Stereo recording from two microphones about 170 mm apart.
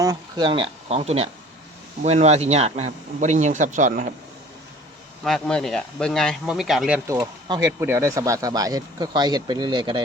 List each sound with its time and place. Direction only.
0.0 s a man's voice: 20° right (ahead or behind); by 4.1 s 50° right (ahead or behind)
5.2 s speech: 5° left (ahead or behind)
7.4 s speech: 25° right (ahead or behind)
7.8 s speech: 15° right (ahead or behind)